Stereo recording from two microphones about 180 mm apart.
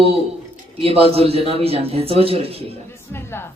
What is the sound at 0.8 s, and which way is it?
A man's voice, 35° right (ahead or behind).